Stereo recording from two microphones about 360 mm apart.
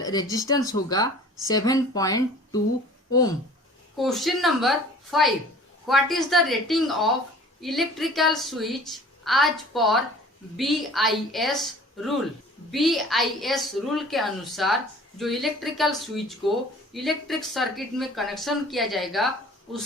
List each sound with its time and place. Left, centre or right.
0.0 s speech: centre
3.9 s a woman's voice: centre